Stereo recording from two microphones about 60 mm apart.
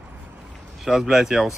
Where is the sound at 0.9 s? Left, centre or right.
Centre.